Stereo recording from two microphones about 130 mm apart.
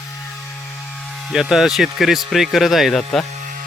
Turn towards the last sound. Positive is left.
turn(degrees=0)  # may be behind; listen again after turning